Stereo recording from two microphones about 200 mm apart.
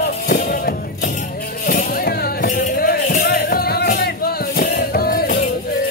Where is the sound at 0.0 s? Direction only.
45° left (ahead or behind).